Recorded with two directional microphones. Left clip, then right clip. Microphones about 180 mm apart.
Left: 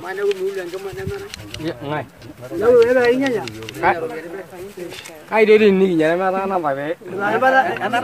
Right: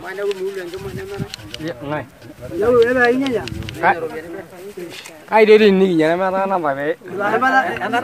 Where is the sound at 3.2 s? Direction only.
10° left (ahead or behind).